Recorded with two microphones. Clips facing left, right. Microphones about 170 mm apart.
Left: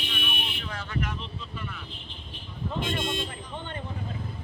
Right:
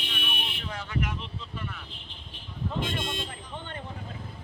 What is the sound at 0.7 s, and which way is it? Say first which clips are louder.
Vehicle: right 1 dB; 15° right (ahead or behind).